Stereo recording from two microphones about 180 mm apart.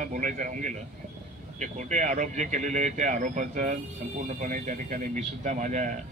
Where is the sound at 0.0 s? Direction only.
45° right (ahead or behind).